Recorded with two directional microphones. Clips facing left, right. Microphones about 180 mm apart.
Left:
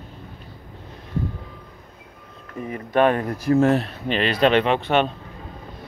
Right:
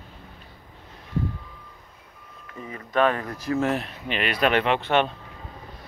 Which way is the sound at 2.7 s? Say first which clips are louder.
Left 4 dB; 25° left (ahead or behind).